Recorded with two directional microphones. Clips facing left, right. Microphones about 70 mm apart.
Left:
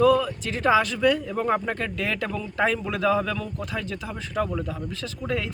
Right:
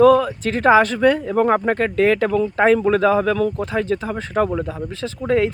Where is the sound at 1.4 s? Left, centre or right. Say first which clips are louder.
Right 8 dB; right.